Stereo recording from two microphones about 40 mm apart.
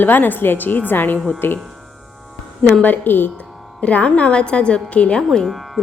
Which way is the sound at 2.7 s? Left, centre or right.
Left.